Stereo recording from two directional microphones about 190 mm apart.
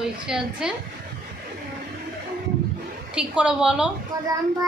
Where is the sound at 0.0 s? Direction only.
5° right (ahead or behind).